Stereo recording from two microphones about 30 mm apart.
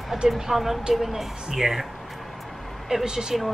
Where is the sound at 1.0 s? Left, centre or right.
Centre.